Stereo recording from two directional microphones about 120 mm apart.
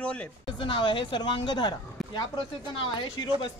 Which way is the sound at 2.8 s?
40° left (ahead or behind).